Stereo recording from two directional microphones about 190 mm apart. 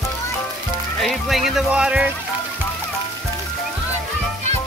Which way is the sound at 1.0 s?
Centre (ahead or behind).